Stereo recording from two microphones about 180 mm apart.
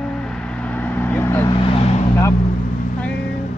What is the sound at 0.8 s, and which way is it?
Vehicle, 10° left (ahead or behind).